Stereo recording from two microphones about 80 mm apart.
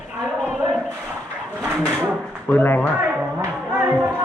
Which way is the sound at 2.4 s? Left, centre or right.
Left.